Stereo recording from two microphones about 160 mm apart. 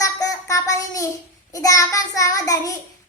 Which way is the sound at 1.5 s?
20° left (ahead or behind).